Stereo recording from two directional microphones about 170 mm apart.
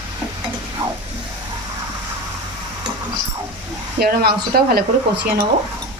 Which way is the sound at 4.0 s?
65° right (ahead or behind).